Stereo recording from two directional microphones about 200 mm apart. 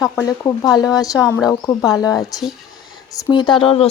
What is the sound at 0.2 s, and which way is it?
Speech, 15° left (ahead or behind).